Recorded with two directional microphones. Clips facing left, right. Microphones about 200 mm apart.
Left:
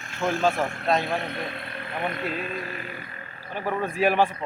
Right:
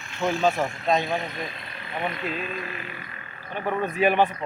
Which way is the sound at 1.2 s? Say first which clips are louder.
Left 2 dB; 60° left (ahead or behind).